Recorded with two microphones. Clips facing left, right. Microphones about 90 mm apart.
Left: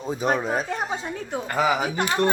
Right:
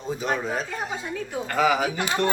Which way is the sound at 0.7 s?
30° left (ahead or behind).